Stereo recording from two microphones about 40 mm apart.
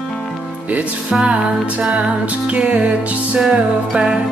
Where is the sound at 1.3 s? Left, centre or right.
Right.